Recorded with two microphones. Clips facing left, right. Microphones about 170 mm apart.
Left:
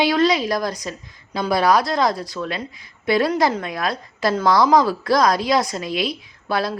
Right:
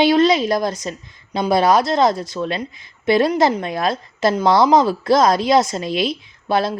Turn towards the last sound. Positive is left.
turn(degrees=-25)  # may be behind; listen again after turning